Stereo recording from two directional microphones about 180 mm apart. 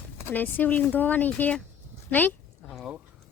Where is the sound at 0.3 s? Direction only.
10° left (ahead or behind).